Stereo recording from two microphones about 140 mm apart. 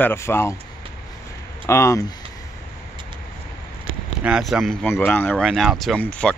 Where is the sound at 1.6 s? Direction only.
20° left (ahead or behind).